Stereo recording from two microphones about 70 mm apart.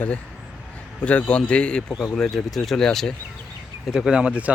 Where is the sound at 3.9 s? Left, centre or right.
Centre.